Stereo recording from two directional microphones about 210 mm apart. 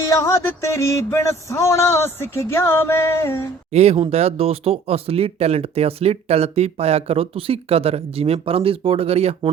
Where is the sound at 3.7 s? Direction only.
30° right (ahead or behind).